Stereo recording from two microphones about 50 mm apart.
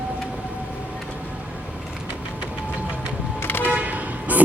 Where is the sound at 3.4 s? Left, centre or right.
Left.